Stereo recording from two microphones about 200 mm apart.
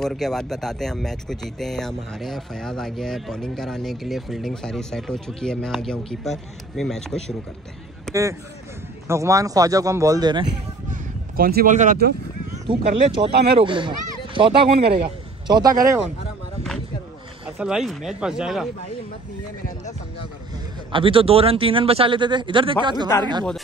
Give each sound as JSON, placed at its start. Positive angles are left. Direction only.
{"t": 0.0, "sound": "speech", "side_deg": 0}
{"t": 8.1, "sound": "a man's voice", "side_deg": -15}
{"t": 10.9, "sound": "a sound", "side_deg": -45}
{"t": 13.3, "sound": "speech", "side_deg": -55}
{"t": 13.6, "sound": "speech", "side_deg": -25}
{"t": 17.6, "sound": "speech", "side_deg": -5}
{"t": 20.9, "sound": "speech", "side_deg": -25}